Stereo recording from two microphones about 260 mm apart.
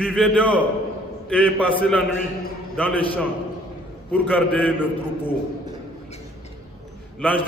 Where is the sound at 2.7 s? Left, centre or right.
Centre.